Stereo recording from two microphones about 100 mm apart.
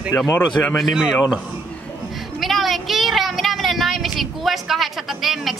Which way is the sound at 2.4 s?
Centre (ahead or behind).